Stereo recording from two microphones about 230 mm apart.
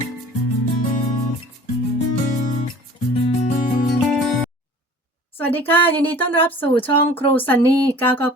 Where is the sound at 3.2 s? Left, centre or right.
Left.